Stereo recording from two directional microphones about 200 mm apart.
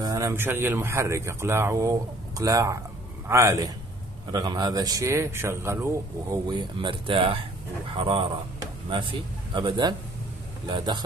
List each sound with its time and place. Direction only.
0.0 s speech: 15° right (ahead or behind)